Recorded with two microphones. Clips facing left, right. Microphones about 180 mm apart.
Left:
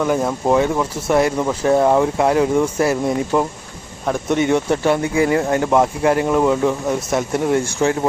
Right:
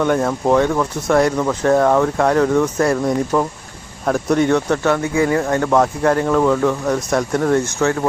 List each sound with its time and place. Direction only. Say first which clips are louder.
0.0 s speech: right 1 dB; 5° left (ahead or behind); by 5.7 s 20° left (ahead or behind)
5.7 s speech: even; 10° left (ahead or behind)